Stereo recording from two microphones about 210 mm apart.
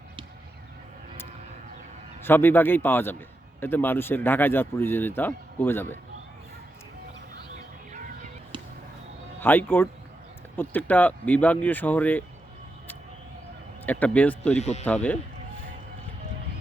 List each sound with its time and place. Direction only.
2.2 s speech: 10° left (ahead or behind)
9.4 s speech: 10° left (ahead or behind)
13.8 s speech: 5° left (ahead or behind)
14.6 s speech: 30° left (ahead or behind)
14.8 s speech: 5° left (ahead or behind)